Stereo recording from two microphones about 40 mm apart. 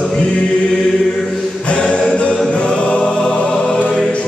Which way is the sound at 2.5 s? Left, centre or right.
Left.